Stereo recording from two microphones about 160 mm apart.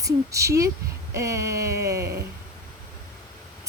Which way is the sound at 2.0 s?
90° right.